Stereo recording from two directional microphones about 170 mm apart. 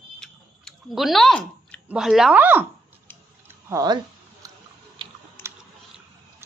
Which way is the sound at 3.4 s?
20° right (ahead or behind).